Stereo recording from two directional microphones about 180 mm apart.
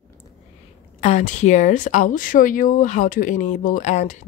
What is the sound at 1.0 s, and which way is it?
Speech, 40° left (ahead or behind).